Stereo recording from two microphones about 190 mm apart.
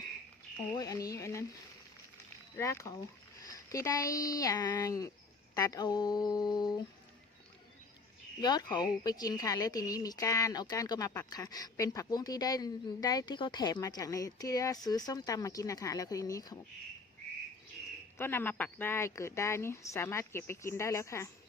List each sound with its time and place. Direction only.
0.8 s speech: 20° left (ahead or behind)
2.6 s speech: 15° left (ahead or behind)
8.4 s speech: 20° left (ahead or behind)
18.2 s speech: 10° left (ahead or behind)